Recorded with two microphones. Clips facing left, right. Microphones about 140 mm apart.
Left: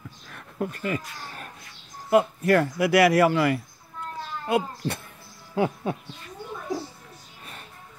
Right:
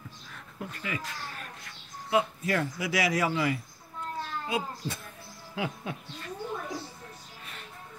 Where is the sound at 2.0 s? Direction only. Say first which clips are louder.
Left 7 dB; 55° left (ahead or behind).